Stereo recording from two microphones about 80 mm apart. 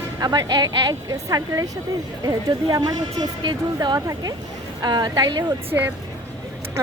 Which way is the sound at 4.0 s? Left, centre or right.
Right.